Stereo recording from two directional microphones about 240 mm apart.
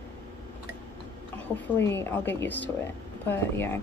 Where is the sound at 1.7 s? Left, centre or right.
Centre.